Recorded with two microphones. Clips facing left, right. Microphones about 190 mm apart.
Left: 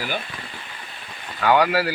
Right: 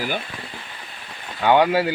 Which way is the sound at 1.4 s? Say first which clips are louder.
Right 2 dB; 25° right (ahead or behind).